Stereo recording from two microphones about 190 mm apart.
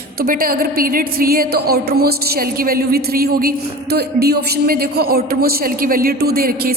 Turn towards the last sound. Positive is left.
turn(degrees=-50)  # may be behind; listen again after turning